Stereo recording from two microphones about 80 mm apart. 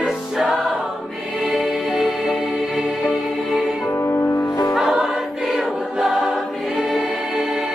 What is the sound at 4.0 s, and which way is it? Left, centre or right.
Music, left.